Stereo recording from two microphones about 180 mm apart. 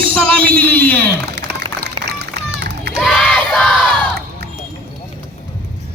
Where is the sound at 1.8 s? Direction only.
70° right (ahead or behind).